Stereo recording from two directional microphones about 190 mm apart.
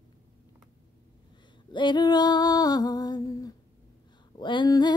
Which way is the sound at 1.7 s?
25° left (ahead or behind).